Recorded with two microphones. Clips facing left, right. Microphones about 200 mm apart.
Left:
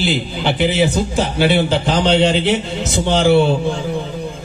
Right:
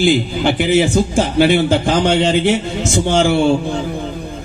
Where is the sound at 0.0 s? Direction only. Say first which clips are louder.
Right 5 dB; 50° right (ahead or behind).